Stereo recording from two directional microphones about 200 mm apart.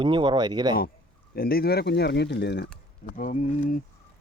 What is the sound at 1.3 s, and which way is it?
Speech, 50° left (ahead or behind).